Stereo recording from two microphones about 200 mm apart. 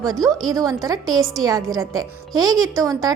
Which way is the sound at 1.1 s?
Centre (ahead or behind).